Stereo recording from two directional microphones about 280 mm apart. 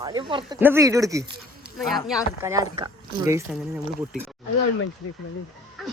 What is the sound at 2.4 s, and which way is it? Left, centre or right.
Speech, centre.